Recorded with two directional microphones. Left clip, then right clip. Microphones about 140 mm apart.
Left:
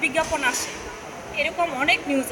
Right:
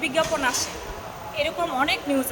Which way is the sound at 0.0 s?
20° right (ahead or behind).